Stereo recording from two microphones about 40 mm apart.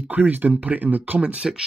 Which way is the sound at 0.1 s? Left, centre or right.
Right.